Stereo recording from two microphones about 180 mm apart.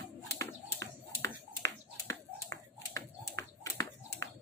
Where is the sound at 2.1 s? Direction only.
15° left (ahead or behind).